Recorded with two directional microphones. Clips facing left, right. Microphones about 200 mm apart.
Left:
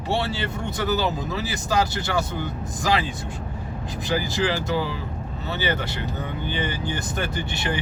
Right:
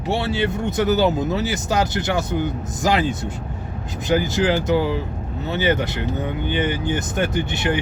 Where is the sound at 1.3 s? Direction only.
20° right (ahead or behind).